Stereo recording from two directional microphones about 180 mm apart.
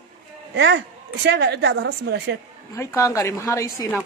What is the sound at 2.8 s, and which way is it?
A woman's voice, 15° left (ahead or behind).